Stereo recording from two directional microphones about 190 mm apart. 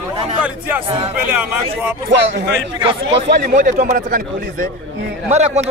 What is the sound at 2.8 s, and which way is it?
Speech, 30° right (ahead or behind).